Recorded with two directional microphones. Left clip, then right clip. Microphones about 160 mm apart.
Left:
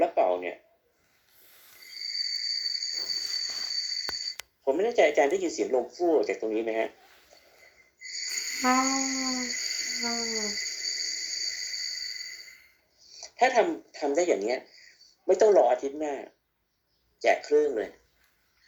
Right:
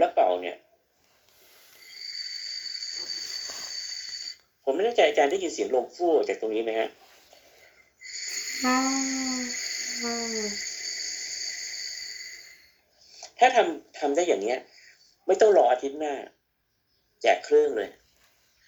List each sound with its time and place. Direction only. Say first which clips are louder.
0.0 s a sound: right 2 dB; 15° left (ahead or behind)
1.9 s cricket: left 4 dB; 15° left (ahead or behind)
6.1 s speech: right 1 dB; 15° left (ahead or behind)
7.6 s wheeze: left 1 dB; 15° left (ahead or behind)
8.9 s a sound: even; 15° left (ahead or behind)
13.0 s speech: right 4 dB; 15° left (ahead or behind)